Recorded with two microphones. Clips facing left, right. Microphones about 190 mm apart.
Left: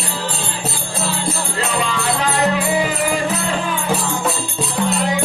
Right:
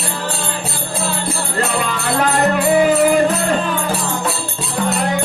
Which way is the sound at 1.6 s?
50° right (ahead or behind).